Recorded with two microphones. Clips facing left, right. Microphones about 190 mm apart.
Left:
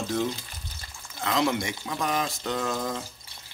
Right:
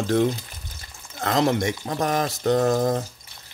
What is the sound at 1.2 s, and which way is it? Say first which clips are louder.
Speech: right 5 dB; 45° right (ahead or behind).